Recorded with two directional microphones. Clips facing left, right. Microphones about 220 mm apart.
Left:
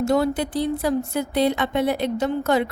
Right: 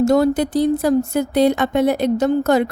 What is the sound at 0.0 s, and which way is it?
A woman's voice, 45° right (ahead or behind).